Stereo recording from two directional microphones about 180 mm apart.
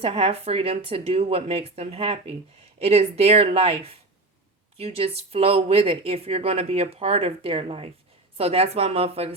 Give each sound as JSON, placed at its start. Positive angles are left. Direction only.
{"t": 0.0, "sound": "a woman's voice", "side_deg": -35}